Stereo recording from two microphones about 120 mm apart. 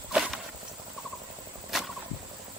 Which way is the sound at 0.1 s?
5° right (ahead or behind).